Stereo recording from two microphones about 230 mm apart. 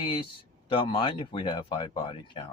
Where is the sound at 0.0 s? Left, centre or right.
Left.